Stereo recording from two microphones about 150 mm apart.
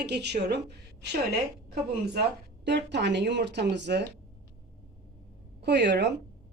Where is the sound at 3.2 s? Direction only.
90° right.